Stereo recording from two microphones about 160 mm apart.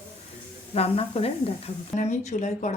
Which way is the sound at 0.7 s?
40° left (ahead or behind).